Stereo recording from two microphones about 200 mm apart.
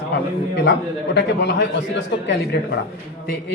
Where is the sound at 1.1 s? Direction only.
60° left (ahead or behind).